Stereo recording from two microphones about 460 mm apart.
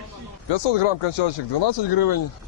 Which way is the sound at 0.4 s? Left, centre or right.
Left.